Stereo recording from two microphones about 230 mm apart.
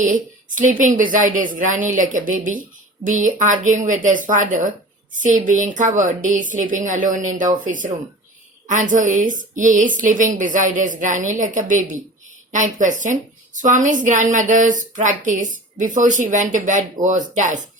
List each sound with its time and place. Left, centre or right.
0.0 s a woman's voice: right